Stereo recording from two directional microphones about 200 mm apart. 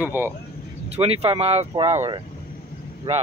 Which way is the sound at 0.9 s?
30° right (ahead or behind).